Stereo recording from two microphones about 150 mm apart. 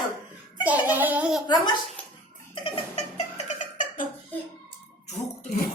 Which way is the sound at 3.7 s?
60° left (ahead or behind).